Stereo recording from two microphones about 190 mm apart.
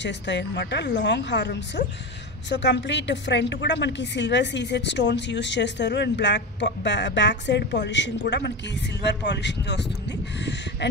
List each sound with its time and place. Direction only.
0.0 s a woman's voice: 70° left (ahead or behind)